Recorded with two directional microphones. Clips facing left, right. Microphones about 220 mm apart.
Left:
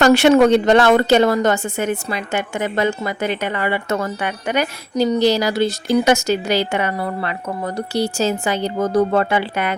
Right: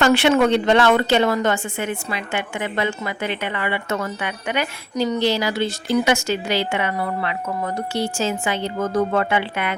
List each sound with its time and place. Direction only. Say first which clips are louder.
0.0 s a woman's voice: left 4 dB; 40° left (ahead or behind)